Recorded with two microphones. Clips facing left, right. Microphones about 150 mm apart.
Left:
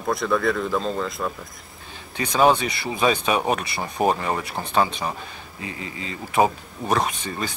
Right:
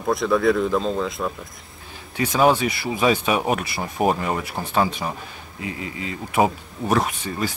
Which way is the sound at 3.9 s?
5° right (ahead or behind).